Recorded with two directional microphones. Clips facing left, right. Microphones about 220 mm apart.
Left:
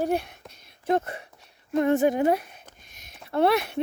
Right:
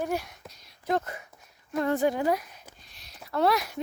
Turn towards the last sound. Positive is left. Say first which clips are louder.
# left 3 dB
turn(degrees=25)  # may be behind; listen again after turning